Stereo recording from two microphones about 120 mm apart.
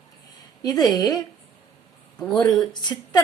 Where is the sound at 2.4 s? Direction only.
35° left (ahead or behind).